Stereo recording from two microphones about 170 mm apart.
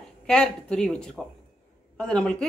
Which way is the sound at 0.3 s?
5° left (ahead or behind).